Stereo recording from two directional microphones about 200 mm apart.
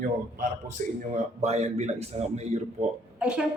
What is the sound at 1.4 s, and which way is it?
A man's voice, 30° right (ahead or behind).